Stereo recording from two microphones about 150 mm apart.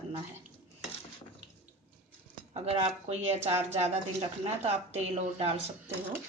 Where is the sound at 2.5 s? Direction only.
40° right (ahead or behind).